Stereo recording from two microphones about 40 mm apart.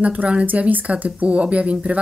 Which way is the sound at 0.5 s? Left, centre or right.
Right.